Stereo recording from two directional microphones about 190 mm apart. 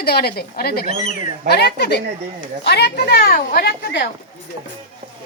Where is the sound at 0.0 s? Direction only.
55° left (ahead or behind).